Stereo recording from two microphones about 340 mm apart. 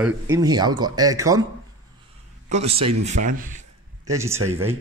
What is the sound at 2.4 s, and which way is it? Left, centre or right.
A man's voice, centre.